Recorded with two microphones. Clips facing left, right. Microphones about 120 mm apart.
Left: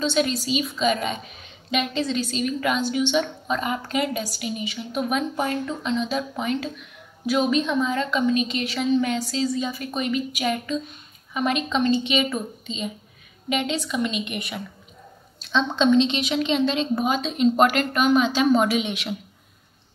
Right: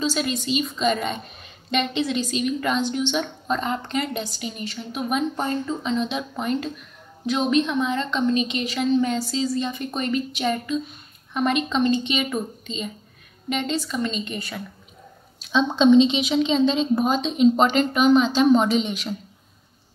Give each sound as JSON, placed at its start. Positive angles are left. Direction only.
{"t": 0.0, "sound": "a woman's voice", "side_deg": 0}
{"t": 15.4, "sound": "a woman's voice", "side_deg": -10}